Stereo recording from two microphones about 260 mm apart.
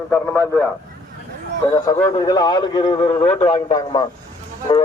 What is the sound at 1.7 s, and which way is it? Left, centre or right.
A man's voice, centre.